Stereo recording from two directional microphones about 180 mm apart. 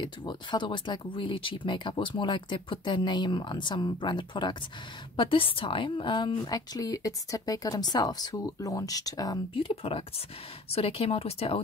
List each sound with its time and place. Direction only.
0.0 s a woman's voice: 25° left (ahead or behind)